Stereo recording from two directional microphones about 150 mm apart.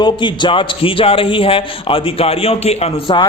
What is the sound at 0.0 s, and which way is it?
A man's voice, 30° left (ahead or behind).